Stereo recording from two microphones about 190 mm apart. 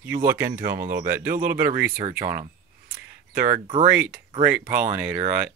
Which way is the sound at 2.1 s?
50° right (ahead or behind).